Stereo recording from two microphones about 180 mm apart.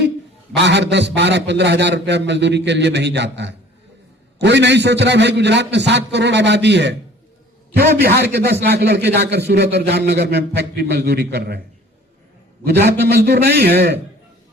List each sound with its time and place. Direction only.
0.5 s a man's voice: 75° right (ahead or behind)
7.8 s a man's voice: 65° right (ahead or behind)
12.6 s a man's voice: 65° right (ahead or behind)